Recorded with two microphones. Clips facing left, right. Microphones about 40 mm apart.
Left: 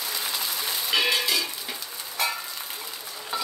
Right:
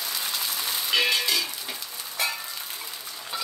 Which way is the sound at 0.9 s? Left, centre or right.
Centre.